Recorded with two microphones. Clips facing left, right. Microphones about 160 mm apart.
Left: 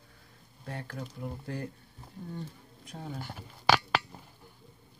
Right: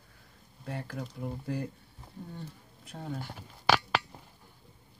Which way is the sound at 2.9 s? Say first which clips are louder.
Right 2 dB; centre (ahead or behind).